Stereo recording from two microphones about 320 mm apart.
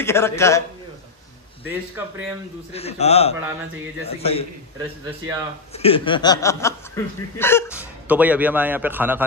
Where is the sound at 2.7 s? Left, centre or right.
Centre.